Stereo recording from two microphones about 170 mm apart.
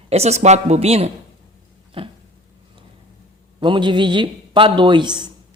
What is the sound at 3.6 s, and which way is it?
A man's voice, 30° right (ahead or behind).